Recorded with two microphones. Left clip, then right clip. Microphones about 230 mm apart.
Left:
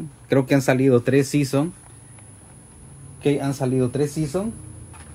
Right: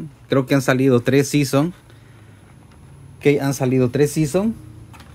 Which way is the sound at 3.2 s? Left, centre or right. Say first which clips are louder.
Right 5 dB; right.